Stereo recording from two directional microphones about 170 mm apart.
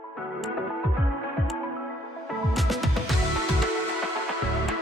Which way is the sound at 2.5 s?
Centre (ahead or behind).